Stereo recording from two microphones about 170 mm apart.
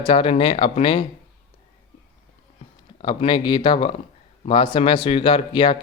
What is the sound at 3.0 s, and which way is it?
Speech, 30° left (ahead or behind).